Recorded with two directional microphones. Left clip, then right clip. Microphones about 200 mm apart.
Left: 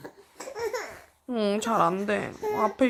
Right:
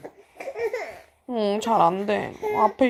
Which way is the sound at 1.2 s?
5° left (ahead or behind).